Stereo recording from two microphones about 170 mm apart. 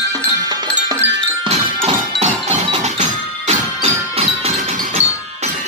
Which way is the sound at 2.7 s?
40° right (ahead or behind).